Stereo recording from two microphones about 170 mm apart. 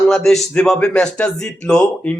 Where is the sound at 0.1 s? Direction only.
Centre (ahead or behind).